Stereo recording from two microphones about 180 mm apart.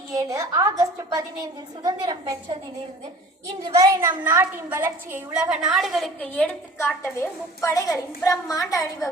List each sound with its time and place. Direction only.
0.1 s a woman's voice: 20° right (ahead or behind)
3.8 s a woman's voice: 15° right (ahead or behind)
6.3 s a woman's voice: 10° left (ahead or behind)